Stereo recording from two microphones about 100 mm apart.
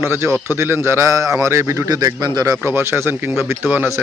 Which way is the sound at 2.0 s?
40° right (ahead or behind).